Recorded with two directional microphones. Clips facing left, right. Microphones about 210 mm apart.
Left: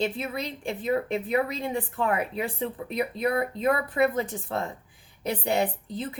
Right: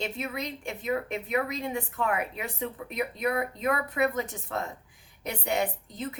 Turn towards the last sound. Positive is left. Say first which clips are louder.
# left 2 dB
turn(degrees=30)  # may be behind; listen again after turning